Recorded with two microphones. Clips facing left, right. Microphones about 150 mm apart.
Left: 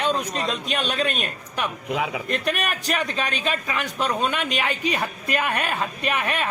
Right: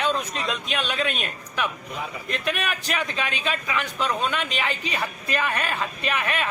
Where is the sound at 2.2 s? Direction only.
45° left (ahead or behind).